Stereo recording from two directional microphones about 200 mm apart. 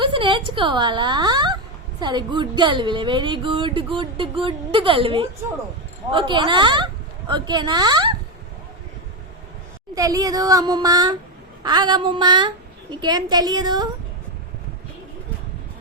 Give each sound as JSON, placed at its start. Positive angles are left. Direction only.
{"t": 0.0, "sound": "a woman's voice", "side_deg": -25}
{"t": 9.9, "sound": "speech", "side_deg": -15}